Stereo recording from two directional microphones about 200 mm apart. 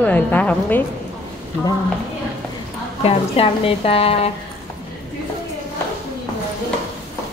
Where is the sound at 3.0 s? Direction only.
30° left (ahead or behind).